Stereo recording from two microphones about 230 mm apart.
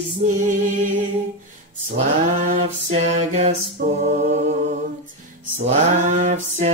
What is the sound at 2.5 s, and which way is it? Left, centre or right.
Music, right.